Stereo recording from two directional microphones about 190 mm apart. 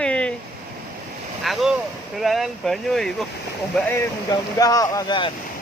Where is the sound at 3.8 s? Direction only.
15° left (ahead or behind).